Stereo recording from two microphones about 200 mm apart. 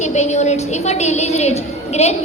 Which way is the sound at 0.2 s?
35° left (ahead or behind).